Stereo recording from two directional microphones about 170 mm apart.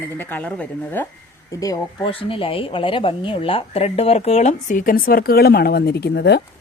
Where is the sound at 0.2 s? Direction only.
10° left (ahead or behind).